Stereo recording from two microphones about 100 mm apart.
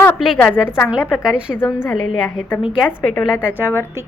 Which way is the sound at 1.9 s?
Centre (ahead or behind).